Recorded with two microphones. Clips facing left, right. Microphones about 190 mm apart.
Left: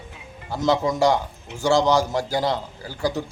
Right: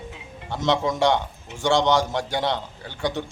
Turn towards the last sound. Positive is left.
turn(degrees=5)  # may be behind; listen again after turning